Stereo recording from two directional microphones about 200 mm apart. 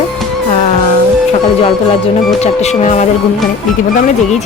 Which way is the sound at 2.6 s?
35° left (ahead or behind).